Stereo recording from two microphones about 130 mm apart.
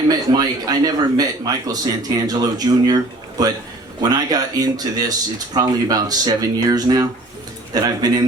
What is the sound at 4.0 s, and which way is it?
Speech, 30° right (ahead or behind).